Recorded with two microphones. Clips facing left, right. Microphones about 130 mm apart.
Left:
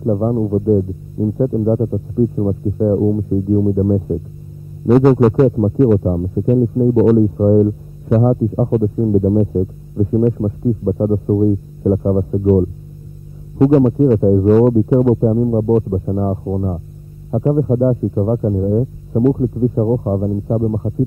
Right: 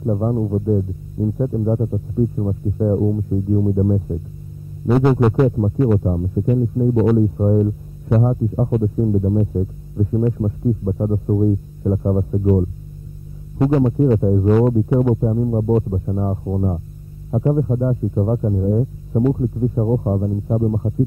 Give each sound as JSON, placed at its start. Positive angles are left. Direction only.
{"t": 0.0, "sound": "speech", "side_deg": 15}
{"t": 2.8, "sound": "speech", "side_deg": 10}
{"t": 4.8, "sound": "music", "side_deg": 0}
{"t": 5.9, "sound": "speech", "side_deg": 15}
{"t": 8.6, "sound": "speech", "side_deg": 15}
{"t": 14.2, "sound": "speech", "side_deg": 20}
{"t": 17.6, "sound": "speech", "side_deg": 25}
{"t": 18.1, "sound": "speech", "side_deg": 15}
{"t": 19.2, "sound": "speech", "side_deg": 25}